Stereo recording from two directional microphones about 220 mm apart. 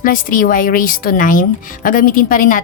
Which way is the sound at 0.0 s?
40° left (ahead or behind).